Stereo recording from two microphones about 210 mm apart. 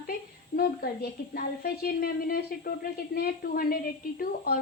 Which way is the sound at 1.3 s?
45° left (ahead or behind).